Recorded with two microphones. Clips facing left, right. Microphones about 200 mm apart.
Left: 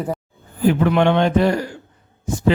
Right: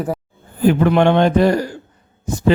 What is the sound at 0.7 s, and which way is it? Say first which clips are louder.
Speech: right 2 dB; 45° right (ahead or behind).